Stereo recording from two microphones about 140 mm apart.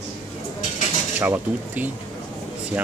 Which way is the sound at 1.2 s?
15° right (ahead or behind).